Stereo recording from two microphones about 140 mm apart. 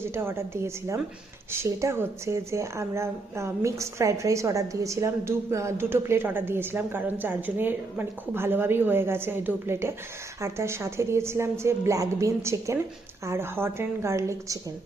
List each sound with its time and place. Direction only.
0.1 s a woman's voice: 15° right (ahead or behind)